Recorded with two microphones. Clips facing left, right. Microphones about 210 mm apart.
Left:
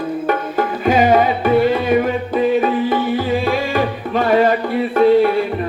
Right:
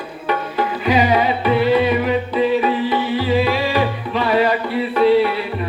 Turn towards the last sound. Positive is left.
turn(degrees=45)  # may be behind; listen again after turning